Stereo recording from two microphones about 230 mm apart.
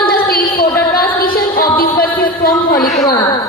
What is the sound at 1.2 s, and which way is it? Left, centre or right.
Music, left.